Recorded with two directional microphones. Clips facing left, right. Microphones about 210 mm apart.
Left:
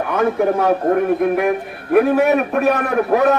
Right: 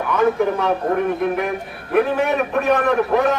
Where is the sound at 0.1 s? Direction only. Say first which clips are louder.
Even; 50° left (ahead or behind).